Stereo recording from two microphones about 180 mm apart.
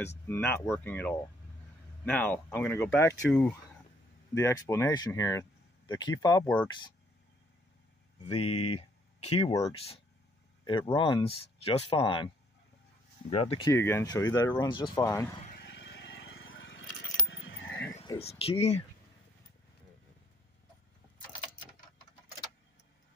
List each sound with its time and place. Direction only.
0.0 s speech: 10° left (ahead or behind)
8.4 s speech: 35° left (ahead or behind)
10.6 s a sound: 25° left (ahead or behind)
11.0 s speech: 30° left (ahead or behind)
13.3 s speech: 30° left (ahead or behind)
13.7 s speech: 15° left (ahead or behind)
15.5 s a sound: 70° left (ahead or behind); by 16.8 s 90° left
17.3 s keys jangling: 90° left
18.2 s speech: 35° left (ahead or behind)